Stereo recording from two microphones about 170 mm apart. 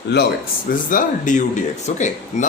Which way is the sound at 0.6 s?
50° left (ahead or behind).